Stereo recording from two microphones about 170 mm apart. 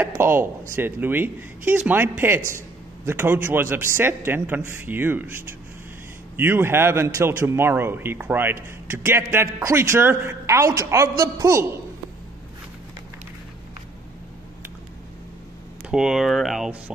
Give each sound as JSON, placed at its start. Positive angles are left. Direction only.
{"t": 0.2, "sound": "a woman's voice", "side_deg": -15}
{"t": 6.3, "sound": "a woman's voice", "side_deg": -10}
{"t": 15.9, "sound": "speech", "side_deg": -5}